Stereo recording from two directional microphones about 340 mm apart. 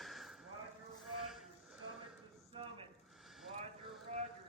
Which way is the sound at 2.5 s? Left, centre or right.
Centre.